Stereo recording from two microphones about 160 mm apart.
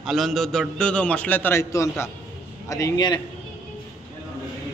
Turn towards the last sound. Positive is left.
turn(degrees=25)  # may be behind; listen again after turning